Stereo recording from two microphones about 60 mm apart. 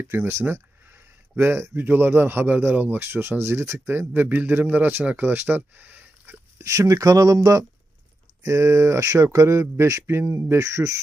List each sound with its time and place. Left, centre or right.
0.3 s a sound: right
1.4 s speech: right
6.6 s speech: right
8.4 s speech: right
10.2 s speech: right